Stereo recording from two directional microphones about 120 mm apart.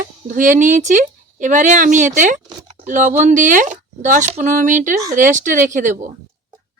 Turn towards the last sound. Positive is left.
turn(degrees=-90)